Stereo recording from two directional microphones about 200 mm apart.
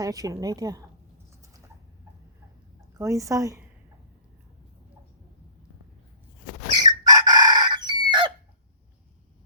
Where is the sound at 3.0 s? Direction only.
15° right (ahead or behind).